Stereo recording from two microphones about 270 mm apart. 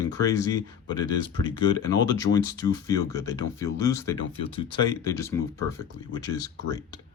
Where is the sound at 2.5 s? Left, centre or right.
Centre.